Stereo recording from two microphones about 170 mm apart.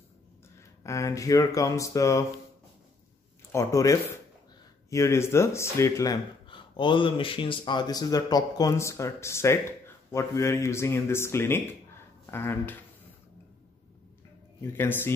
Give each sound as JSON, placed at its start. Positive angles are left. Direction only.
{"t": 0.8, "sound": "speech", "side_deg": 20}
{"t": 3.5, "sound": "speech", "side_deg": 20}
{"t": 6.4, "sound": "speech", "side_deg": 30}
{"t": 14.6, "sound": "speech", "side_deg": 15}